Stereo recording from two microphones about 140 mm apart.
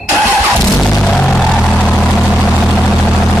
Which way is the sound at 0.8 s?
5° left (ahead or behind).